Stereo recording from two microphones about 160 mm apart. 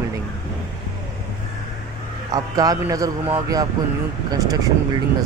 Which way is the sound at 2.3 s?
25° right (ahead or behind).